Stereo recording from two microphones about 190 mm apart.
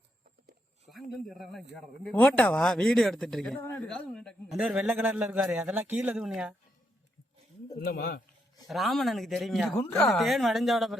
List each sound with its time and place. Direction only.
0.9 s speech: centre (ahead or behind)
7.9 s a man's voice: 50° left (ahead or behind)
8.6 s speech: centre (ahead or behind)